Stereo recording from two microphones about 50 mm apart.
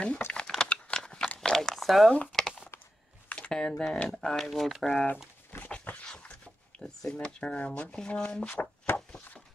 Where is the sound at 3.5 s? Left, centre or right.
Centre.